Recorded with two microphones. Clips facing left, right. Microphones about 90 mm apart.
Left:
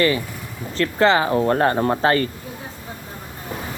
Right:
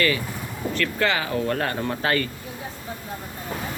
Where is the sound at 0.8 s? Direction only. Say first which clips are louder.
Left 8 dB; 30° left (ahead or behind).